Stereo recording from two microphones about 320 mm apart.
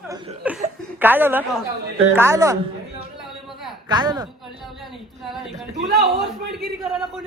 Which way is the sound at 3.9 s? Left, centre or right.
Centre.